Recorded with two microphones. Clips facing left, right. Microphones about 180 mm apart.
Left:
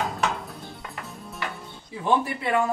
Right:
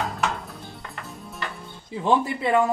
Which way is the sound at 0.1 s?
Centre (ahead or behind).